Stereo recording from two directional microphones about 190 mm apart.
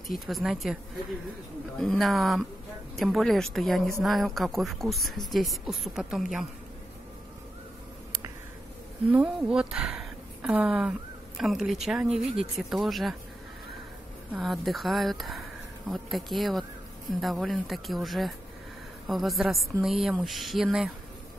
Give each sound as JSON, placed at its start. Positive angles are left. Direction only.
{"t": 0.1, "sound": "speech", "side_deg": 0}
{"t": 1.8, "sound": "speech", "side_deg": 0}
{"t": 9.1, "sound": "speech", "side_deg": -5}
{"t": 14.3, "sound": "speech", "side_deg": 0}